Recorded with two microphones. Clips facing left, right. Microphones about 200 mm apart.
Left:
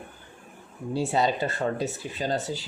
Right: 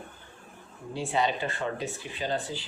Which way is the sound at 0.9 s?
40° left (ahead or behind).